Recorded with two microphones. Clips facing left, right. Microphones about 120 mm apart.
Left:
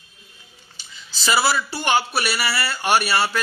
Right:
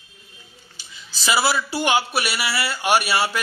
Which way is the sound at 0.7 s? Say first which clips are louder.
Even; 10° right (ahead or behind).